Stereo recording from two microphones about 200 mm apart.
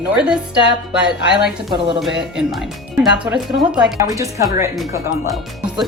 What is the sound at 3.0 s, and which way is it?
Speech, 5° right (ahead or behind).